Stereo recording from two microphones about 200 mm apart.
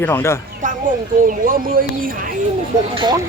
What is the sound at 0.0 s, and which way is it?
Speech, 10° left (ahead or behind).